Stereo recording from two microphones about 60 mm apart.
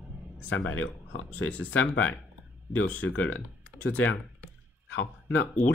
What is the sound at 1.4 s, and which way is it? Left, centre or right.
Speech, left.